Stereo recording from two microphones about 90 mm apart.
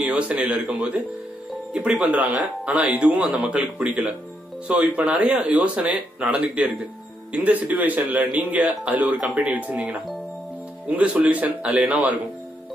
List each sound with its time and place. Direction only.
0.0 s speech: 10° right (ahead or behind)